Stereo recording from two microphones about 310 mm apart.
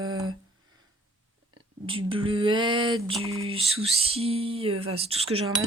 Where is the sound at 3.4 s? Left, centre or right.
Centre.